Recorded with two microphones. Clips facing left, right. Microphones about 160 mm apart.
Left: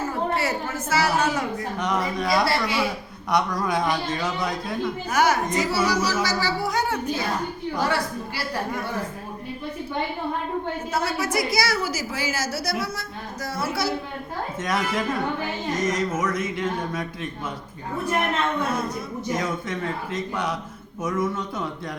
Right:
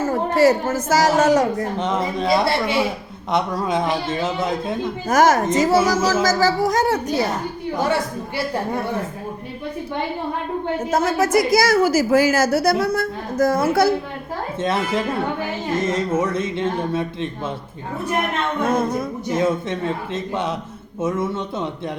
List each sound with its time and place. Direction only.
0.0 s a sound: 45° right (ahead or behind)
0.9 s a woman's voice: 40° right (ahead or behind)
1.8 s speech: 25° right (ahead or behind)
5.0 s a woman's voice: 45° right (ahead or behind)
7.8 s speech: 20° right (ahead or behind)
10.9 s a woman's voice: 45° right (ahead or behind)
14.6 s speech: 25° right (ahead or behind)
18.7 s a woman's voice: 50° right (ahead or behind)
19.3 s speech: 25° right (ahead or behind)